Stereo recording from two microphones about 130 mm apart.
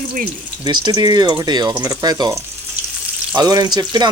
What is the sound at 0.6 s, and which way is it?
Speech, 35° right (ahead or behind).